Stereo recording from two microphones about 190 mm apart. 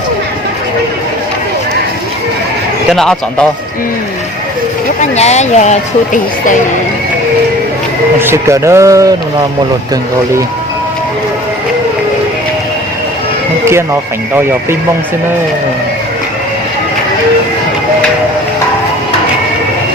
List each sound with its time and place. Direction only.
2.9 s speech: centre (ahead or behind)
5.1 s speech: 35° left (ahead or behind)
8.2 s speech: 15° right (ahead or behind)